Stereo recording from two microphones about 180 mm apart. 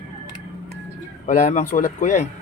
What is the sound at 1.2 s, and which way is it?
A man's voice, 40° left (ahead or behind).